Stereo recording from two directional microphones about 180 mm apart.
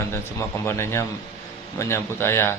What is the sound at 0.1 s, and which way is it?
Speech, 15° left (ahead or behind).